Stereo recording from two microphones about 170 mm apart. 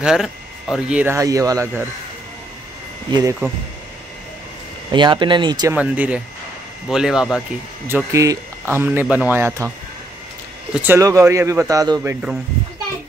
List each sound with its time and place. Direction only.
0.0 s speech: centre (ahead or behind)
3.1 s speech: 25° right (ahead or behind)
4.9 s speech: 25° right (ahead or behind)
5.8 s speech: 5° right (ahead or behind)
7.9 s speech: 20° right (ahead or behind)
10.7 s speech: 10° right (ahead or behind)